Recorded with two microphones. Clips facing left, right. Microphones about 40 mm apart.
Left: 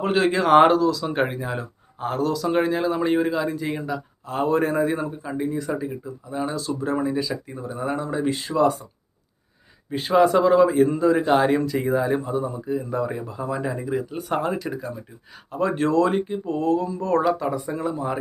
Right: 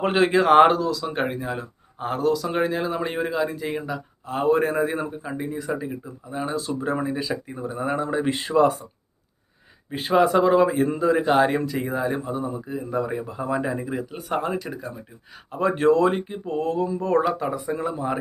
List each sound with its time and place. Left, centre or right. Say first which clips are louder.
0.0 s a man's voice: right 1 dB; right; by 1.6 s centre
2.0 s speech: right 1 dB; centre
8.3 s speech: right 3 dB; right
9.9 s a man's voice: left 1 dB; centre